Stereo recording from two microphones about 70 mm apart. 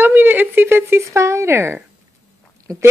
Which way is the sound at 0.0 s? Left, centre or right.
Right.